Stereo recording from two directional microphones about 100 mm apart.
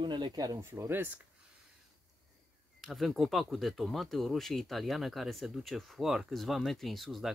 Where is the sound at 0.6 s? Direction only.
25° right (ahead or behind).